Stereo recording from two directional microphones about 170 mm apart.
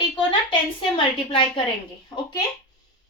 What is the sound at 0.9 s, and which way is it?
Speech, 30° left (ahead or behind).